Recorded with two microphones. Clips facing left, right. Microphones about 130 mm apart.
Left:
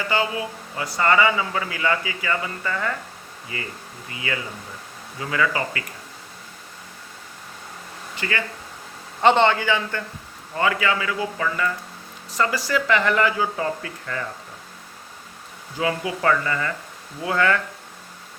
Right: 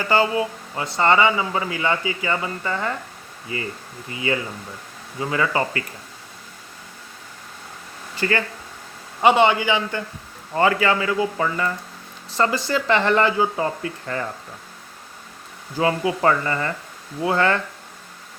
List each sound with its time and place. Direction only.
0.1 s a man's voice: 35° right (ahead or behind)
8.2 s speech: 40° right (ahead or behind)
9.2 s a man's voice: 10° right (ahead or behind)
10.5 s a man's voice: 35° right (ahead or behind)
15.8 s speech: 30° right (ahead or behind)